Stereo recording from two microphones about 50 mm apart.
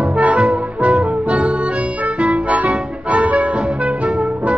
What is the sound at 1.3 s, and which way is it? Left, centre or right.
Accordion, right.